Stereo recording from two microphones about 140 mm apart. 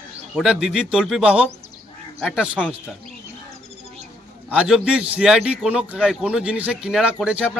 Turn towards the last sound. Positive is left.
turn(degrees=-5)  # may be behind; listen again after turning